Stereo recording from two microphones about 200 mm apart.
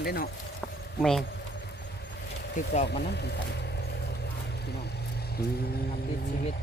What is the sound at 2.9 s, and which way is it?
Speech, 55° left (ahead or behind).